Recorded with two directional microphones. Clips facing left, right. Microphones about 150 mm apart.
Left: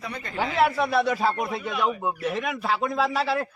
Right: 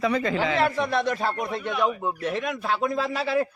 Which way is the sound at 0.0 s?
90° right.